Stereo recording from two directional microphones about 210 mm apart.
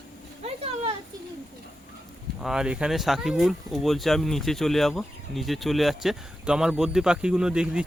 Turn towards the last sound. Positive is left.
turn(degrees=-5)  # may be behind; listen again after turning